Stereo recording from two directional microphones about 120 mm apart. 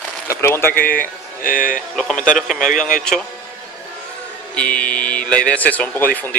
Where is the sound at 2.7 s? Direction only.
90° left.